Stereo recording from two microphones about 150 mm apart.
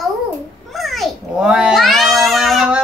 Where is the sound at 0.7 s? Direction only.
Centre (ahead or behind).